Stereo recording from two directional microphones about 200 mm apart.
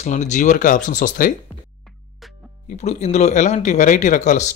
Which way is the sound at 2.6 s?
35° left (ahead or behind).